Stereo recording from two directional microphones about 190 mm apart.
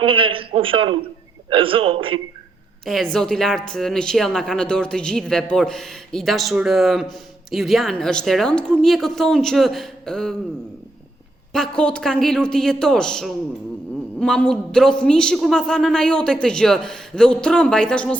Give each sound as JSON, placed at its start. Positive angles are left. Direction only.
{"t": 0.0, "sound": "a man's voice", "side_deg": -25}
{"t": 2.8, "sound": "a woman's voice", "side_deg": 0}
{"t": 11.5, "sound": "a woman's voice", "side_deg": 5}